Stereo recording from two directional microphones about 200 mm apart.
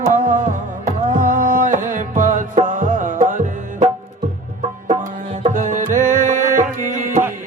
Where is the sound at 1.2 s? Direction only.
40° right (ahead or behind).